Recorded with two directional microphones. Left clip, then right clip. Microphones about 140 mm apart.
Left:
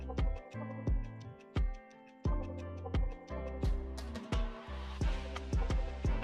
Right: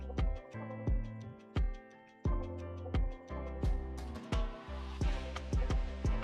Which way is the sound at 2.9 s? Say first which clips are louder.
Even; centre (ahead or behind).